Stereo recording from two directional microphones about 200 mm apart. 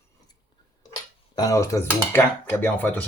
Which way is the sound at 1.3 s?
20° left (ahead or behind).